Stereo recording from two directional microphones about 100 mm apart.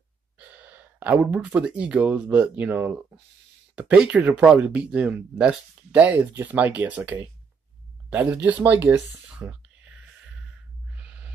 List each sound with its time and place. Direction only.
0.9 s speech: 15° right (ahead or behind)
9.3 s whispering: 10° right (ahead or behind)